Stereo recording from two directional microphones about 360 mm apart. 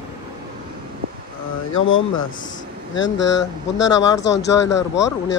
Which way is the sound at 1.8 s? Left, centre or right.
Left.